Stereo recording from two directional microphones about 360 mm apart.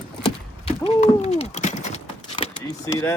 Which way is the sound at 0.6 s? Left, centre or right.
Centre.